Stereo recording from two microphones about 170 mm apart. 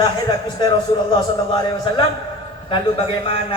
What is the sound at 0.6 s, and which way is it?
A man's voice, 25° left (ahead or behind).